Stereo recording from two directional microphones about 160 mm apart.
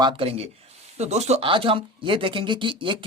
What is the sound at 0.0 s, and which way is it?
Speech, 35° right (ahead or behind).